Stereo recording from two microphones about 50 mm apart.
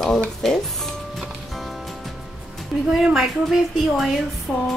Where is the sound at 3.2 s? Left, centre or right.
Centre.